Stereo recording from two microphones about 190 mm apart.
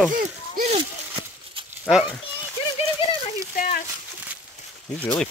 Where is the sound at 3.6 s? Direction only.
45° left (ahead or behind).